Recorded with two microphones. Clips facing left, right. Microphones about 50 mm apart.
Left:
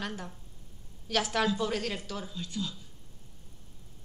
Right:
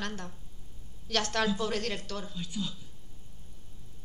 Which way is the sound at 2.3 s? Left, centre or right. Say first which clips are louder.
Left 1 dB; centre.